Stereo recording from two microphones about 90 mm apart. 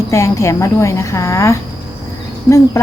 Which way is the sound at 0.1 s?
35° left (ahead or behind).